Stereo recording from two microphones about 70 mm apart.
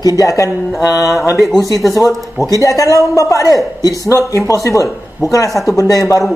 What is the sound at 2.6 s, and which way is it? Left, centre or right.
A man's voice, left.